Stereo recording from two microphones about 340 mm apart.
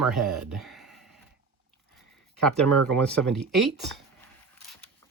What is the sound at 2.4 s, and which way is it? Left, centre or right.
Speech, centre.